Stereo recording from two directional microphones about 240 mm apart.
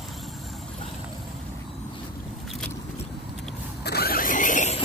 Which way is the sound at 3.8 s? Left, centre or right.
Left.